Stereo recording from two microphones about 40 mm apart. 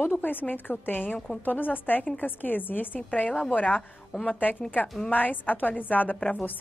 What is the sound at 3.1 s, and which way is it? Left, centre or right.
A woman's voice, left.